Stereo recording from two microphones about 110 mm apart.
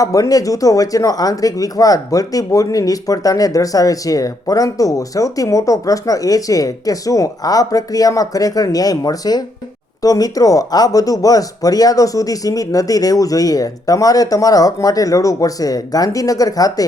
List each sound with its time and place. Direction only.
0.0 s speech: 30° left (ahead or behind)